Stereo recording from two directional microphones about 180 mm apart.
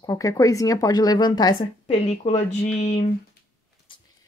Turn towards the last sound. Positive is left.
turn(degrees=35)  # may be behind; listen again after turning